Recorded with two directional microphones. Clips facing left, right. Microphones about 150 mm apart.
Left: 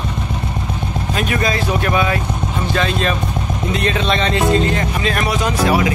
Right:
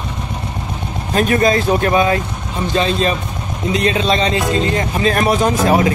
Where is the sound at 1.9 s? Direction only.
30° right (ahead or behind).